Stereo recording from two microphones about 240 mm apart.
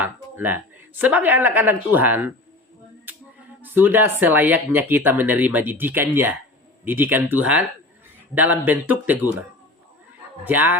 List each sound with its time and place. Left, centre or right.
0.0 s speech: centre
3.1 s music: centre
3.6 s speech: centre
10.4 s speech: centre